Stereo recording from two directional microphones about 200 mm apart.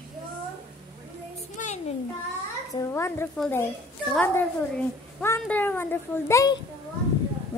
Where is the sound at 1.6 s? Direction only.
40° left (ahead or behind).